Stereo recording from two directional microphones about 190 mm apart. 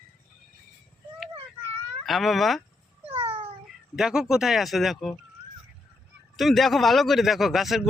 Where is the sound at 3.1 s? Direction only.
30° right (ahead or behind).